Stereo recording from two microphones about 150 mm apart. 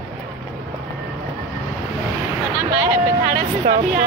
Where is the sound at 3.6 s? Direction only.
55° right (ahead or behind).